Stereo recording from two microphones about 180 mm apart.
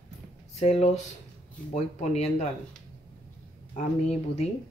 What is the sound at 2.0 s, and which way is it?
Speech, 40° left (ahead or behind).